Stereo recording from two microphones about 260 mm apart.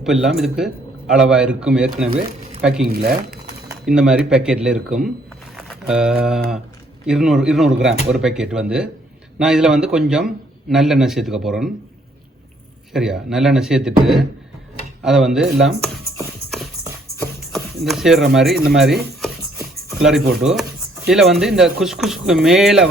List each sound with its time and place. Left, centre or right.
0.0 s a man's voice: centre
2.8 s speech: right
3.7 s a man's voice: centre
12.9 s a man's voice: centre
17.4 s a man's voice: centre